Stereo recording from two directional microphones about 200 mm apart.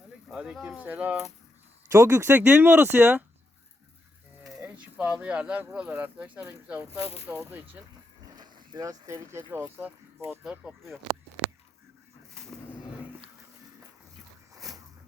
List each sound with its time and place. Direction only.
0.3 s speech: centre (ahead or behind)
4.4 s speech: 5° right (ahead or behind)
7.0 s speech: 30° left (ahead or behind)
7.3 s speech: 10° right (ahead or behind)
8.4 s speech: 20° right (ahead or behind); by 11.0 s centre (ahead or behind)